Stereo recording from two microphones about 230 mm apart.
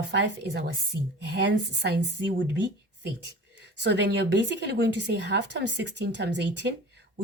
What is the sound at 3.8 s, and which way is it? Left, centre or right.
Speech, right.